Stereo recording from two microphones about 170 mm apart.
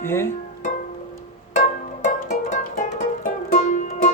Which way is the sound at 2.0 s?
50° left (ahead or behind).